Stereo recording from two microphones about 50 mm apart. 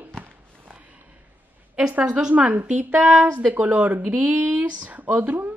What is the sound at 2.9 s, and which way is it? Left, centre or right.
Speech, centre.